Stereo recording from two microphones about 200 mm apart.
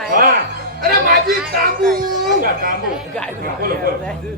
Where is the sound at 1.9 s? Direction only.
45° right (ahead or behind).